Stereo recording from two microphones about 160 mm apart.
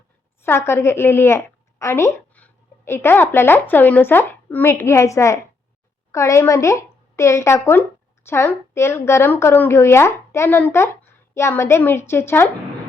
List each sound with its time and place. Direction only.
0.4 s a woman's voice: 15° left (ahead or behind)